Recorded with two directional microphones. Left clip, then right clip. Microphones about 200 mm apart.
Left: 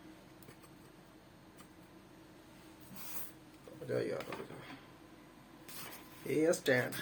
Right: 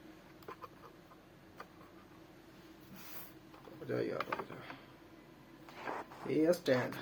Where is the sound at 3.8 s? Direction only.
5° right (ahead or behind).